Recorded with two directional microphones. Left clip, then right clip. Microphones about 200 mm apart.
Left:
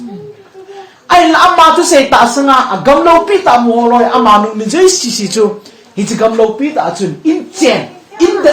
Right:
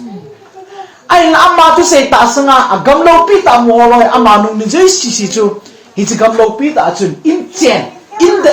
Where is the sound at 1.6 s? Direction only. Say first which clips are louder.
Even; 20° left (ahead or behind).